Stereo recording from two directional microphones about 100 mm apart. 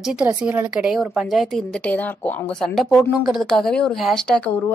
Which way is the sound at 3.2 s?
5° right (ahead or behind).